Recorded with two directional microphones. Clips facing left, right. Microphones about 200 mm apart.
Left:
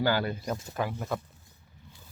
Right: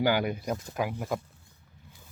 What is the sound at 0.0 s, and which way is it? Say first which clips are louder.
Speech: right 1 dB; 15° right (ahead or behind).